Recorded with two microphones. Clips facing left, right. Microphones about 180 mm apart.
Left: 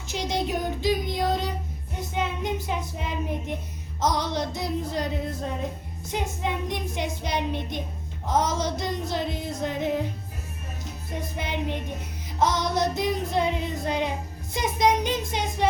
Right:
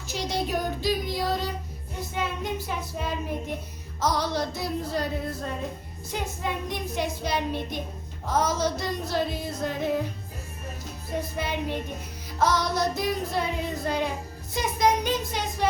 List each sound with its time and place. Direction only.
0.1 s child singing: 20° left (ahead or behind)
11.3 s child singing: 20° left (ahead or behind)
15.3 s music: 20° left (ahead or behind)